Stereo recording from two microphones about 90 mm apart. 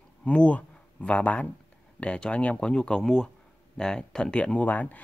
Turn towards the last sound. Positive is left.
turn(degrees=20)  # may be behind; listen again after turning